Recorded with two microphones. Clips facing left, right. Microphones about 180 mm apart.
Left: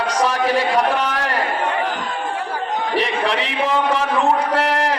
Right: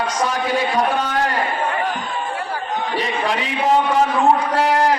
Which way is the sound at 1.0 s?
70° left (ahead or behind).